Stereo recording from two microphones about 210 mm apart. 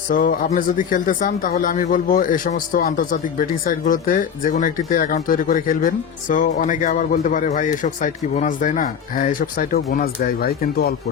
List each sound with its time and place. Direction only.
0.1 s speech: 40° left (ahead or behind)